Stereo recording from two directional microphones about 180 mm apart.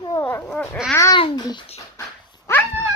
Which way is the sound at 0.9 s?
15° left (ahead or behind).